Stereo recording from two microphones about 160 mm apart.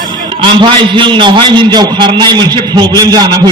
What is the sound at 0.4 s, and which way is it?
A man's voice, 30° right (ahead or behind).